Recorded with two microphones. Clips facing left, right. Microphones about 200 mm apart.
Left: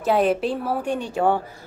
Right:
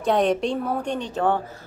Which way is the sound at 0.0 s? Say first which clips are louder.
Left 1 dB; 5° left (ahead or behind).